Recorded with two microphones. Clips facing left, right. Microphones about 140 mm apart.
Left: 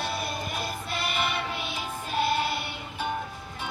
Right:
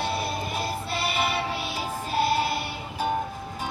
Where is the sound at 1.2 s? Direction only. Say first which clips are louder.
Right 3 dB; 35° right (ahead or behind).